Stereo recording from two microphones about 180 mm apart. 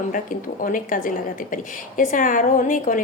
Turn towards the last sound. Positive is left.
turn(degrees=45)  # may be behind; listen again after turning